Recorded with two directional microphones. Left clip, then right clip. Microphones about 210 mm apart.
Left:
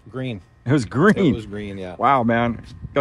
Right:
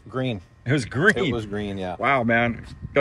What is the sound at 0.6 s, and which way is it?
Speech, 20° left (ahead or behind).